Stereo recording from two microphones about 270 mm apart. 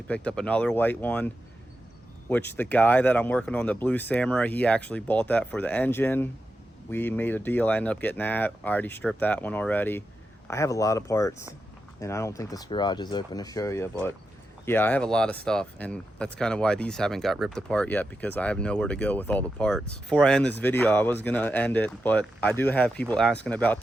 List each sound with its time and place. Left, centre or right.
0.1 s speech: centre
2.3 s speech: centre